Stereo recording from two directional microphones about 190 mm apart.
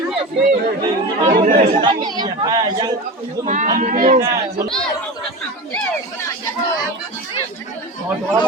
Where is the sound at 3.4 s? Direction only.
45° right (ahead or behind).